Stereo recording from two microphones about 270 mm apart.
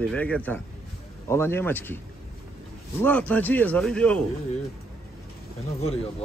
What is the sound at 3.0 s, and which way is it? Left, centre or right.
A man's voice, centre.